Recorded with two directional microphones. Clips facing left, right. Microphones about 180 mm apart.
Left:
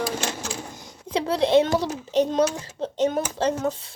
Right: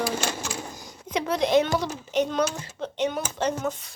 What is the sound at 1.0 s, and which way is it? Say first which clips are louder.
A child's voice: left 2 dB; 30° left (ahead or behind).